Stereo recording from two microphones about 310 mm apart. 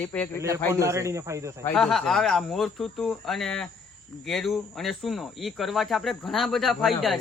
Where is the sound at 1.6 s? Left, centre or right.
Centre.